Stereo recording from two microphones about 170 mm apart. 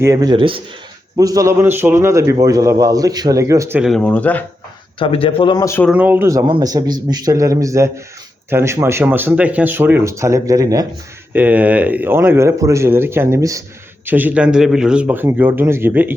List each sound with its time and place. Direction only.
0.0 s a man's voice: 20° right (ahead or behind)
3.8 s speech: centre (ahead or behind)
4.9 s speech: 30° left (ahead or behind)
5.5 s speech: 15° left (ahead or behind)
5.9 s speech: 10° right (ahead or behind)
6.4 s a man's voice: 25° right (ahead or behind)
11.3 s speech: 10° right (ahead or behind)